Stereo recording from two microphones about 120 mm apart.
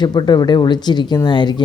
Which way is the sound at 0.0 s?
35° left (ahead or behind).